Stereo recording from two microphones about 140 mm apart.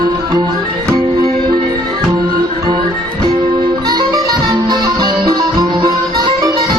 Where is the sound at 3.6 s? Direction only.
30° right (ahead or behind).